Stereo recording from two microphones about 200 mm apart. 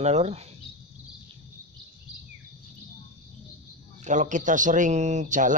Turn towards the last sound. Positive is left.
turn(degrees=-40)  # may be behind; listen again after turning